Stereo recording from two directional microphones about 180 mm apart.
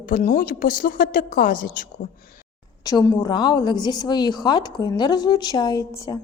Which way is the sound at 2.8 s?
20° left (ahead or behind).